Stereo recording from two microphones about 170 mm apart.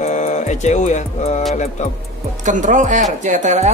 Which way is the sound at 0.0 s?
45° left (ahead or behind).